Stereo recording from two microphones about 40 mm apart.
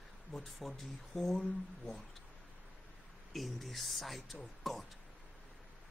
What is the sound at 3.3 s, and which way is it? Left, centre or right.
Speech, centre.